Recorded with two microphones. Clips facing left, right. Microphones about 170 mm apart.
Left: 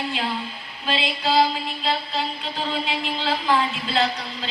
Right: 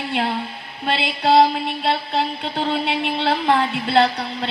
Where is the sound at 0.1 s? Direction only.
65° right (ahead or behind).